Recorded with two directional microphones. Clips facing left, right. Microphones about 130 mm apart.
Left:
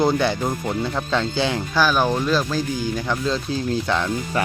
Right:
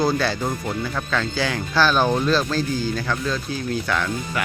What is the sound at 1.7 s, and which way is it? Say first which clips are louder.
Speech: right 2 dB; 10° left (ahead or behind).